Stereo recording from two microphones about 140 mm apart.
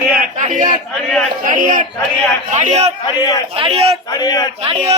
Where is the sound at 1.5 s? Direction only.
70° right (ahead or behind).